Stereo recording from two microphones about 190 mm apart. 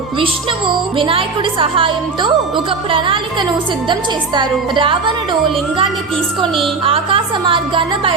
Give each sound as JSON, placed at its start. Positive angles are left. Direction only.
{"t": 0.9, "sound": "a woman's voice", "side_deg": -25}
{"t": 4.4, "sound": "a woman's voice", "side_deg": -25}
{"t": 6.8, "sound": "a woman's voice", "side_deg": -30}